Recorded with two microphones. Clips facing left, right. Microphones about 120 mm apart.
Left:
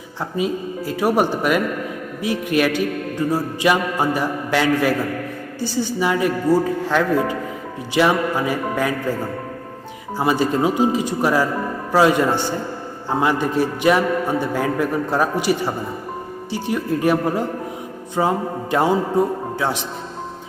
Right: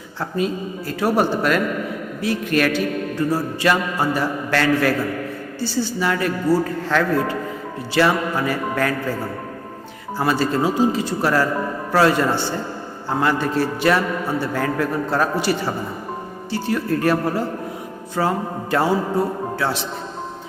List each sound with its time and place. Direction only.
0.2 s a man's voice: 10° left (ahead or behind)
10.2 s a man's voice: 15° left (ahead or behind)